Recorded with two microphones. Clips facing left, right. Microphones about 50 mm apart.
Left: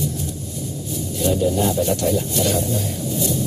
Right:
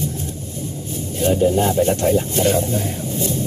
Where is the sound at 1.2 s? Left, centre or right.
Right.